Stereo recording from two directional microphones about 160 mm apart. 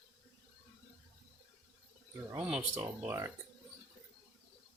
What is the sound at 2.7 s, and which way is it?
Speech, 20° right (ahead or behind).